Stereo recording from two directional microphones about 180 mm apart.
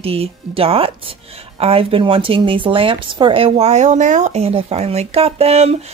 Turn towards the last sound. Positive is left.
turn(degrees=-35)  # may be behind; listen again after turning